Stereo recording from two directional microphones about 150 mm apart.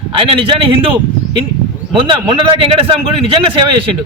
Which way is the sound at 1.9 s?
35° right (ahead or behind).